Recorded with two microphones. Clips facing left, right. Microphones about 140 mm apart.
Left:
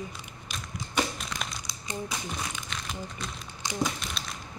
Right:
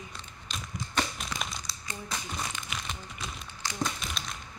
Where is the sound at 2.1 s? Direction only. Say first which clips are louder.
Left 1 dB; centre (ahead or behind).